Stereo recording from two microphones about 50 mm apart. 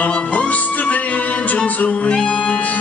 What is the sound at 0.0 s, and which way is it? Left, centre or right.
Music, left.